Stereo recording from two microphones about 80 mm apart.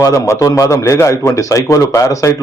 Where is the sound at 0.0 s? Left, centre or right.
Left.